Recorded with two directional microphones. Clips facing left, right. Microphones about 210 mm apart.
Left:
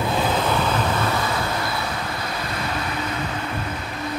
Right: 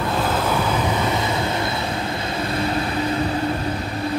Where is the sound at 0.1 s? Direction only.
Centre (ahead or behind); by 4.1 s 35° right (ahead or behind).